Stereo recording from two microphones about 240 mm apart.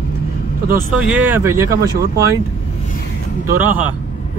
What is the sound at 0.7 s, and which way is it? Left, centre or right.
Speech, centre.